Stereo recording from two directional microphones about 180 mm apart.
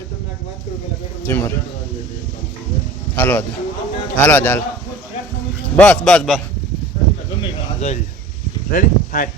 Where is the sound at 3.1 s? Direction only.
10° left (ahead or behind).